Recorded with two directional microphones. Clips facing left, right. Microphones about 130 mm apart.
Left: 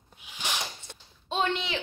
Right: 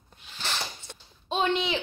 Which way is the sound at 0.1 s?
10° left (ahead or behind).